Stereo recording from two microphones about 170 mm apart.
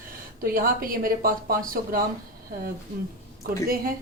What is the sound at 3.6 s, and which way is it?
Speech, 60° right (ahead or behind).